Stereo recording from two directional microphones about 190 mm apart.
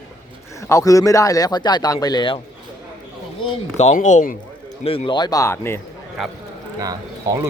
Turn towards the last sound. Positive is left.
turn(degrees=-20)  # may be behind; listen again after turning